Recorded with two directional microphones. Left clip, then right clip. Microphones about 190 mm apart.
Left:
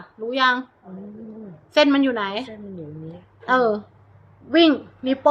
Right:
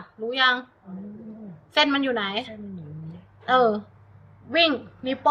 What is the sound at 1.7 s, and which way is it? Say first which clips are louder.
Speech: left 4 dB; 35° left (ahead or behind).